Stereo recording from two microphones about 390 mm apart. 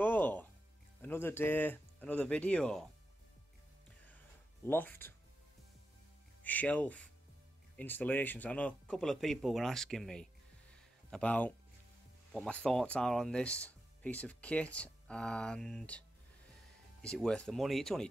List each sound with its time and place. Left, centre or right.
0.0 s music: centre
1.0 s speech: centre
4.6 s speech: centre
6.4 s speech: centre
17.0 s speech: centre